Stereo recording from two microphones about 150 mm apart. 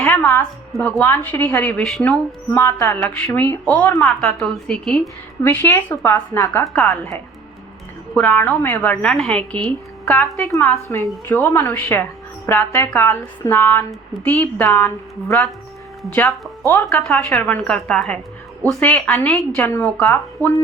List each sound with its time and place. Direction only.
0.0 s a sound: 10° left (ahead or behind)
0.8 s a woman's voice: 10° left (ahead or behind)
1.8 s speech: centre (ahead or behind)
2.0 s a woman's voice: 10° left (ahead or behind)
5.4 s a woman's voice: 15° left (ahead or behind)
20.4 s speech: 20° right (ahead or behind)